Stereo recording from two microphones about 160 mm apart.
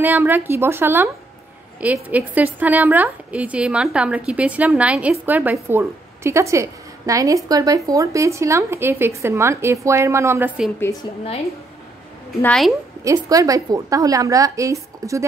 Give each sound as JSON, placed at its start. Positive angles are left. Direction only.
{"t": 0.0, "sound": "a woman's voice", "side_deg": -10}
{"t": 10.8, "sound": "a woman's voice", "side_deg": 20}
{"t": 12.4, "sound": "a woman's voice", "side_deg": 5}
{"t": 13.0, "sound": "a woman's voice", "side_deg": -20}